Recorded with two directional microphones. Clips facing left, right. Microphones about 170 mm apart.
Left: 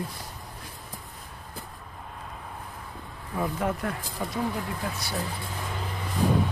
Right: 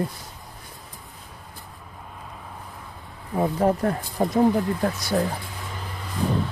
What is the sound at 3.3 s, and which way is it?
Speech, 35° right (ahead or behind).